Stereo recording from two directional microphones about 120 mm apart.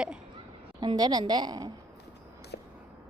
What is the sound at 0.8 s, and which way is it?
Speech, 35° right (ahead or behind).